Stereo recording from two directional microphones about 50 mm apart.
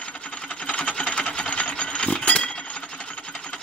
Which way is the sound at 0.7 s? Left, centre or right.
Centre.